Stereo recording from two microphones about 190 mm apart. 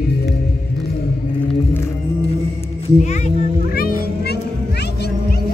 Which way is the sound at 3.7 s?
50° left (ahead or behind).